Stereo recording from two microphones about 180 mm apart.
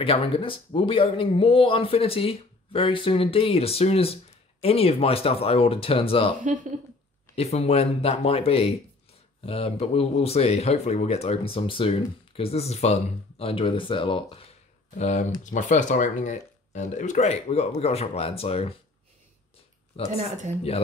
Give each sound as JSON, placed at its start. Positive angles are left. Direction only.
{"t": 0.0, "sound": "speech", "side_deg": 30}
{"t": 6.4, "sound": "speech", "side_deg": -45}
{"t": 7.3, "sound": "speech", "side_deg": 35}
{"t": 15.0, "sound": "speech", "side_deg": 40}
{"t": 20.2, "sound": "speech", "side_deg": -40}